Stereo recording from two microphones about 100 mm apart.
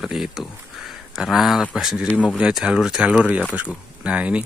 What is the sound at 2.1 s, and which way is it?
Speech, 15° left (ahead or behind).